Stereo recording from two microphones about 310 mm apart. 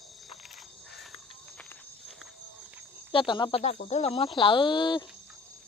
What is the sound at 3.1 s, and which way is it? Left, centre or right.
Speech, centre.